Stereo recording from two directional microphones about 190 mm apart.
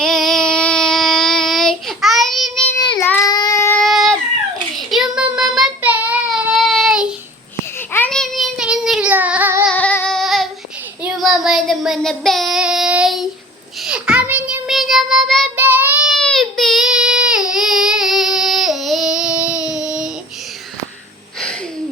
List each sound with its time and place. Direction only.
0.0 s child singing: centre (ahead or behind)
3.0 s child singing: 15° left (ahead or behind)
3.8 s a sound: centre (ahead or behind)
4.7 s child singing: centre (ahead or behind)
9.6 s child singing: 10° left (ahead or behind)
15.5 s child singing: 10° right (ahead or behind)